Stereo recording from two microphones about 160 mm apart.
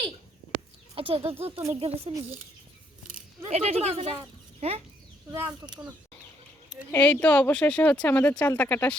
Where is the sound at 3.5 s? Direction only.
40° right (ahead or behind).